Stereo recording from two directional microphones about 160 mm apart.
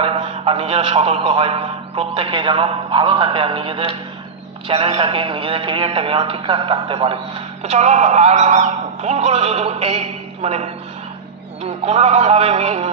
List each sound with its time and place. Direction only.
0.0 s a man's voice: 35° right (ahead or behind)